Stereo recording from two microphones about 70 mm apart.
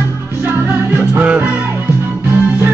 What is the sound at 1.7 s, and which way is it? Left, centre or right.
Music, right.